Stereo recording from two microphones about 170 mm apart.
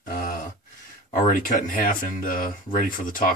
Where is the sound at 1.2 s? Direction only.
55° left (ahead or behind).